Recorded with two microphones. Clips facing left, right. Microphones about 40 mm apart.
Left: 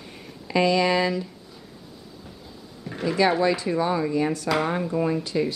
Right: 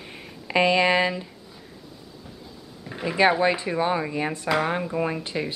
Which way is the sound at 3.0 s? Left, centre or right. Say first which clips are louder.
Right 1 dB; right.